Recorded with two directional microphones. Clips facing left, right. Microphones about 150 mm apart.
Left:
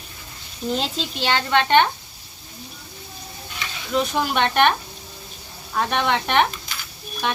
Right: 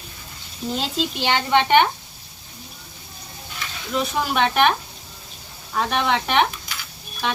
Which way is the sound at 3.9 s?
Centre (ahead or behind).